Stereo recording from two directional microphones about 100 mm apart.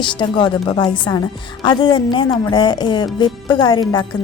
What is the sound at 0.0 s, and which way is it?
A woman's voice, 50° left (ahead or behind).